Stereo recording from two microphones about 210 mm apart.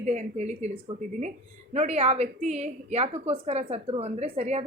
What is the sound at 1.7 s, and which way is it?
A woman's voice, 30° right (ahead or behind).